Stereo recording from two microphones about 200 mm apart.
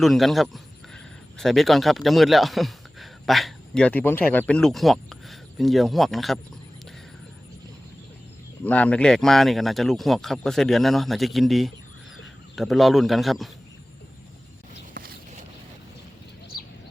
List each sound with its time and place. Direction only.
0.0 s speech: centre (ahead or behind)
8.6 s speech: 5° left (ahead or behind)
15.0 s a sound: 45° right (ahead or behind)